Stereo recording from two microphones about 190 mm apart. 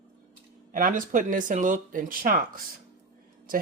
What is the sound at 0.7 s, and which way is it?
Speech, 45° right (ahead or behind).